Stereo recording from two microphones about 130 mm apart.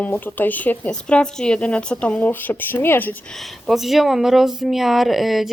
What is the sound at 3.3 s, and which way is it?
Speech, centre (ahead or behind).